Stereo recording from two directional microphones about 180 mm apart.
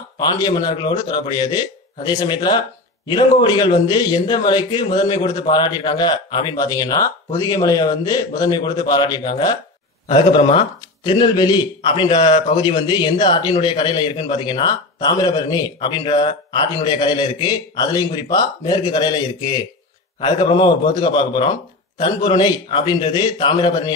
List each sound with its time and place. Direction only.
0.2 s speech: 20° left (ahead or behind)